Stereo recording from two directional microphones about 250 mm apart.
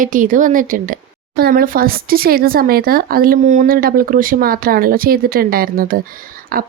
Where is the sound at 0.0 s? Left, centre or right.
Right.